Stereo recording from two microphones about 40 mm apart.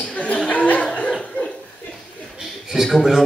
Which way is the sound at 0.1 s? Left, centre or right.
Left.